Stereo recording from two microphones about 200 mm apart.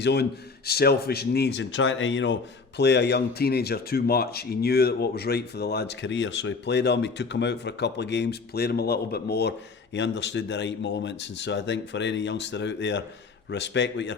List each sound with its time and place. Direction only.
0.0 s a man's voice: 55° left (ahead or behind)